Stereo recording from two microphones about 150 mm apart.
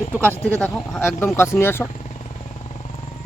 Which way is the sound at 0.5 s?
10° left (ahead or behind).